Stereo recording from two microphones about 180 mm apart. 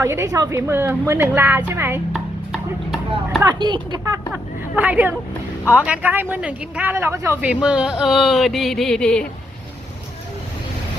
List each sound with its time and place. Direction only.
0.0 s a woman's voice: 15° right (ahead or behind)
2.1 s a sound: centre (ahead or behind)
3.4 s speech: 25° right (ahead or behind)
4.3 s a woman's voice: 5° right (ahead or behind)